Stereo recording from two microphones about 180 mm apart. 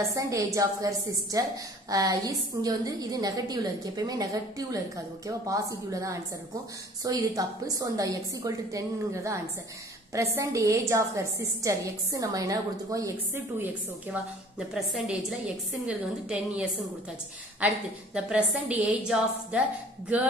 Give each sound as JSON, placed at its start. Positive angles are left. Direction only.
{"t": 0.1, "sound": "a woman's voice", "side_deg": -15}